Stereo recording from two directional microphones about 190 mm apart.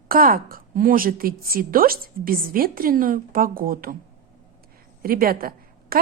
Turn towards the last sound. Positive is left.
turn(degrees=-50)  # may be behind; listen again after turning